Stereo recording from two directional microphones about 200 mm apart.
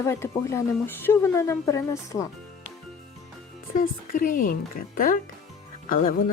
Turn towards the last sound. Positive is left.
turn(degrees=40)  # may be behind; listen again after turning